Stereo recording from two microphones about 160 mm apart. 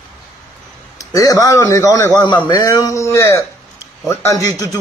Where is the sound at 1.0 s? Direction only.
20° left (ahead or behind).